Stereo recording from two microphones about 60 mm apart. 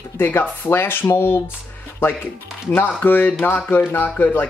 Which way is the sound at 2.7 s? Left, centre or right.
Left.